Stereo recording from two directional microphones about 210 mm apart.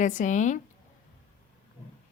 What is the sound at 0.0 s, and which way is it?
Speech, 35° left (ahead or behind).